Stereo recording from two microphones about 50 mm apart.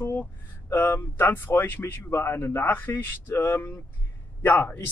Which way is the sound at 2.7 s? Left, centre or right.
Left.